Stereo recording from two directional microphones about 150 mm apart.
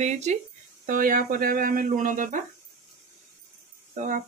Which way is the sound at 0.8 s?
65° right (ahead or behind).